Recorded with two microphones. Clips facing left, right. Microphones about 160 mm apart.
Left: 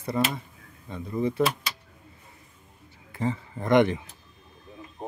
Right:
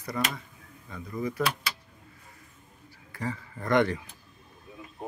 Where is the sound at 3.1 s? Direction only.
20° left (ahead or behind).